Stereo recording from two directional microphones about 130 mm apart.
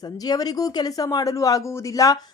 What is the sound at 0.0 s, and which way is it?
Speech, 30° left (ahead or behind).